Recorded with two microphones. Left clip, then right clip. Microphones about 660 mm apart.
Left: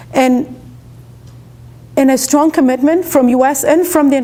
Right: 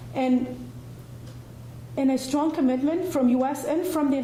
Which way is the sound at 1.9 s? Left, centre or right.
Left.